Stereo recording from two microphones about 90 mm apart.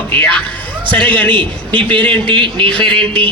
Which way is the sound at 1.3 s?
65° right (ahead or behind).